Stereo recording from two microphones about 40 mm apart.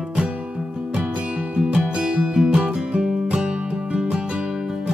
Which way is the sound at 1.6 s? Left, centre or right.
Right.